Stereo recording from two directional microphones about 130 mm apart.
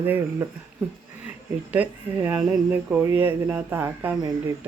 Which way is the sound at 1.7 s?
10° right (ahead or behind).